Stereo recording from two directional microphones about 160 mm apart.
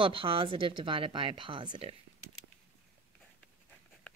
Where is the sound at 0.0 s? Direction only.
35° right (ahead or behind).